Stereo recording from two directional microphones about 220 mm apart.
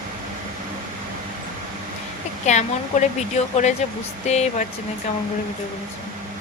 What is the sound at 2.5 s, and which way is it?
Speech, 35° left (ahead or behind).